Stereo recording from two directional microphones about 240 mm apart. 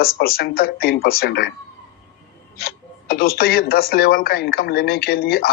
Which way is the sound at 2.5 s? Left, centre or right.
Left.